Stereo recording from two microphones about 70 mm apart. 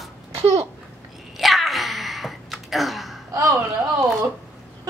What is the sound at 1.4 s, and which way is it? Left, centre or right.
Gasp, centre.